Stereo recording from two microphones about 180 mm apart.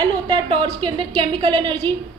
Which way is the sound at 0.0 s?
30° right (ahead or behind).